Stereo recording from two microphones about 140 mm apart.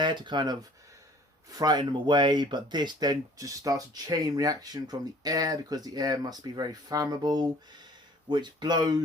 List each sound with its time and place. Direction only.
0.0 s speech: 35° right (ahead or behind)
1.5 s speech: 30° right (ahead or behind)